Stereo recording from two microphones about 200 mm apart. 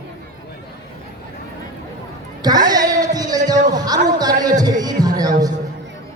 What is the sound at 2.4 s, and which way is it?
Speech, 20° right (ahead or behind).